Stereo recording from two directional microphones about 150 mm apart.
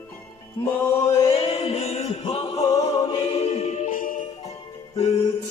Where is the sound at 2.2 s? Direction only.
35° left (ahead or behind).